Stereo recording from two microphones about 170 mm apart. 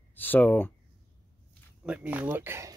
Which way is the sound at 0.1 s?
10° left (ahead or behind).